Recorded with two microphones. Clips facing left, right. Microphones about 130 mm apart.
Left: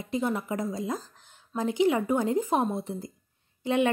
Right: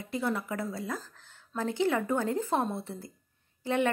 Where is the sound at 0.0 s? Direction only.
20° left (ahead or behind).